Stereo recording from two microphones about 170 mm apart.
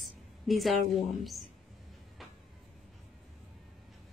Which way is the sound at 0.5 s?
Centre (ahead or behind).